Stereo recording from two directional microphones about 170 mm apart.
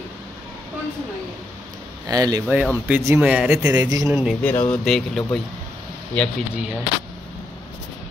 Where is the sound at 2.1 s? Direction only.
20° right (ahead or behind).